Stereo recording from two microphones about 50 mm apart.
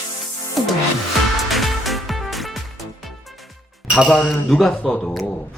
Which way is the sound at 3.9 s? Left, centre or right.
Centre.